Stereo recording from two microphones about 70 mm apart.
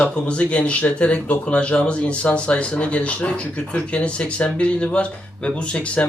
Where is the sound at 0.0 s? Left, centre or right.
Centre.